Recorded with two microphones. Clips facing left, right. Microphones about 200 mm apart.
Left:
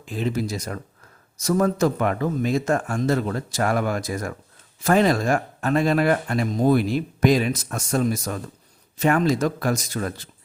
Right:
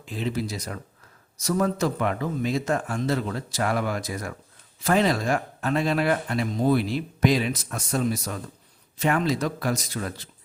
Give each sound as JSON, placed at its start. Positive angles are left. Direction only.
{"t": 0.0, "sound": "speech", "side_deg": 45}